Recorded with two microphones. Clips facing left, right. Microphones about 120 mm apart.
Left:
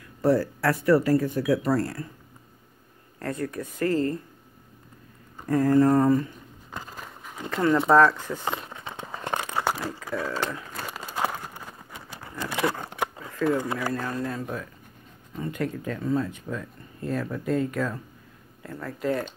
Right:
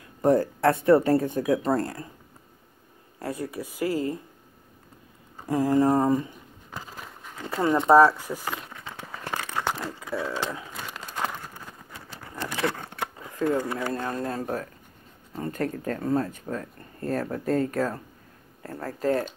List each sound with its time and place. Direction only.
0.2 s speech: 20° right (ahead or behind)
3.2 s speech: 10° right (ahead or behind)
5.5 s speech: 15° right (ahead or behind)
6.7 s a sound: centre (ahead or behind)
7.4 s speech: 15° right (ahead or behind)
8.4 s crumpling: 25° left (ahead or behind); by 9.9 s 10° left (ahead or behind)
10.0 s speech: 5° right (ahead or behind)
11.0 s a sound: 10° left (ahead or behind)
13.4 s speech: 20° right (ahead or behind)
14.1 s speech: 40° right (ahead or behind)